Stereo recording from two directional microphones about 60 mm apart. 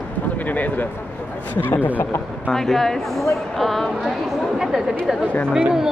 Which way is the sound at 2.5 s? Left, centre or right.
Centre.